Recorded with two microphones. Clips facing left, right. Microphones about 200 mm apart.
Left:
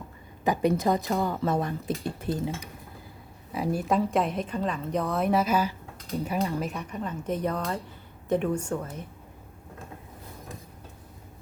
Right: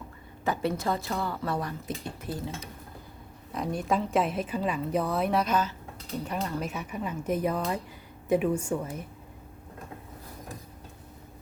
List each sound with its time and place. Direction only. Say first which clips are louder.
0.4 s a woman's voice: left 5 dB; 15° left (ahead or behind)
3.5 s a woman's voice: left 2 dB; 5° left (ahead or behind)